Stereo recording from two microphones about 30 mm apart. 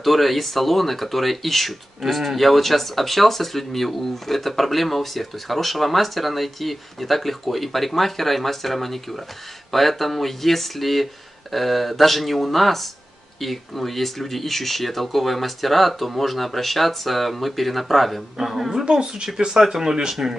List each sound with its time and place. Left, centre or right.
0.0 s speech: centre
18.4 s speech: centre
18.7 s speech: centre